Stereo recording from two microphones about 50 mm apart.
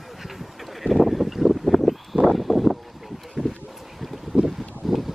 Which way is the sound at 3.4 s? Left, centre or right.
Centre.